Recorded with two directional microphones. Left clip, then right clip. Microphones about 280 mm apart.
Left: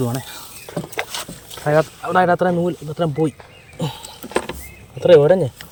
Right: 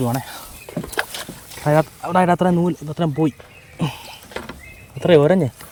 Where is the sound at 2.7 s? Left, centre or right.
Centre.